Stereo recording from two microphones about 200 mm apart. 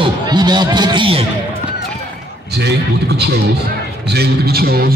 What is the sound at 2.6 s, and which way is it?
A man's voice, 55° right (ahead or behind).